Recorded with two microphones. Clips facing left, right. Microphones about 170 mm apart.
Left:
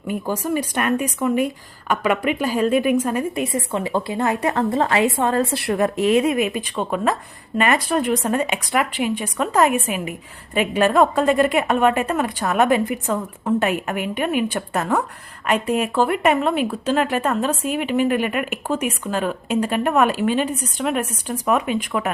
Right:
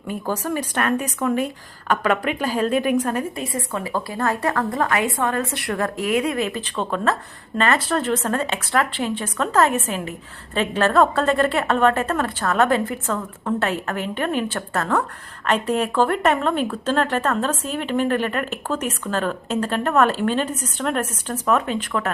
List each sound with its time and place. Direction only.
0.3 s a woman's voice: 10° left (ahead or behind)